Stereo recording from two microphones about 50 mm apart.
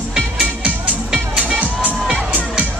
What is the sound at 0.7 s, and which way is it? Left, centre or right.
Music, right.